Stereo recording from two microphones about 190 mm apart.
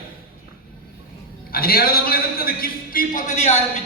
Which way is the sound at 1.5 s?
55° left (ahead or behind).